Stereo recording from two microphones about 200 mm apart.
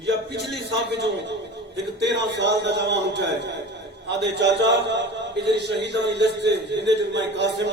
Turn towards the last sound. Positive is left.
turn(degrees=-60)  # may be behind; listen again after turning